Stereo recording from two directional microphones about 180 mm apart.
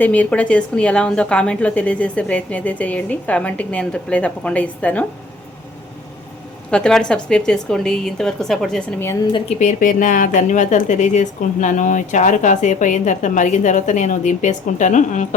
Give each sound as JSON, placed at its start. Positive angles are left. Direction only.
{"t": 0.0, "sound": "a woman's voice", "side_deg": 10}
{"t": 6.7, "sound": "a woman's voice", "side_deg": 5}
{"t": 9.3, "sound": "speech", "side_deg": 35}